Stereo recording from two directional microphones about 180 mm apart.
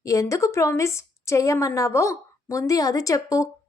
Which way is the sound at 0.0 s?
15° left (ahead or behind).